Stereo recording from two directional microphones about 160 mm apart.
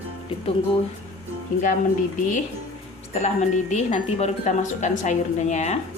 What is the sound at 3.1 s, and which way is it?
A woman's voice, 45° left (ahead or behind).